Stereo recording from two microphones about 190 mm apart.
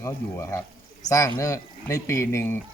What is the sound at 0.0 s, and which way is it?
Speech, 15° left (ahead or behind).